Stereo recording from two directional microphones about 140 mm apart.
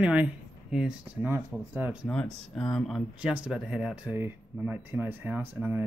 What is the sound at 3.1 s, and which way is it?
Speech, 5° right (ahead or behind).